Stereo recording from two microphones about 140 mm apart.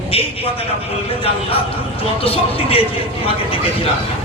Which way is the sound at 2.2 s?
45° left (ahead or behind).